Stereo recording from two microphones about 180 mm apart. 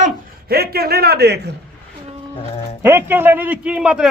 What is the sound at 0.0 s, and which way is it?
A man's voice, 60° right (ahead or behind).